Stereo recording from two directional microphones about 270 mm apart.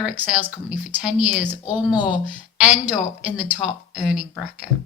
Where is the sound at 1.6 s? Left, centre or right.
Centre.